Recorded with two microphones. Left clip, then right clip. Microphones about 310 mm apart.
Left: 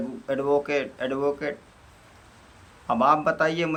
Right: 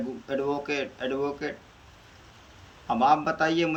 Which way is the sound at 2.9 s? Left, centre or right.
Centre.